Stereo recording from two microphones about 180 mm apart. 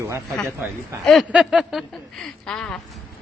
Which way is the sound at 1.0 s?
Centre (ahead or behind).